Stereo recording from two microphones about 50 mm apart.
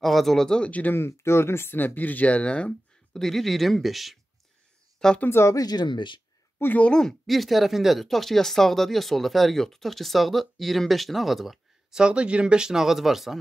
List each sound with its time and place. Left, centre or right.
0.0 s speech: centre
0.7 s speech: left
0.9 s speech: left
3.1 s speech: centre
4.9 s a sound: centre
5.3 s speech: left
6.9 s speech: centre
7.2 s speech: centre
11.9 s speech: centre